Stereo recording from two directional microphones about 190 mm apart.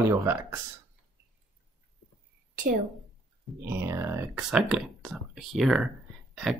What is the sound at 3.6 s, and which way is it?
Speech, 15° right (ahead or behind).